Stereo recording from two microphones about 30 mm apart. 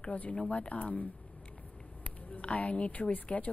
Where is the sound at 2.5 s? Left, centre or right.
Left.